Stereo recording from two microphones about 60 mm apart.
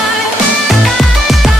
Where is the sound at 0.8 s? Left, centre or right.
Centre.